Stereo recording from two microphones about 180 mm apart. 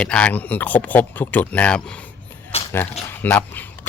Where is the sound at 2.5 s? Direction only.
35° left (ahead or behind).